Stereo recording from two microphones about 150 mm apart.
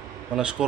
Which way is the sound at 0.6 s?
5° right (ahead or behind).